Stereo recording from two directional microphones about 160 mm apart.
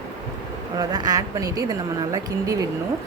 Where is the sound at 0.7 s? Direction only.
25° right (ahead or behind).